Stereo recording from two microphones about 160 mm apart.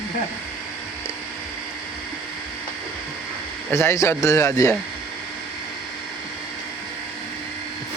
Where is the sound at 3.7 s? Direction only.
20° left (ahead or behind).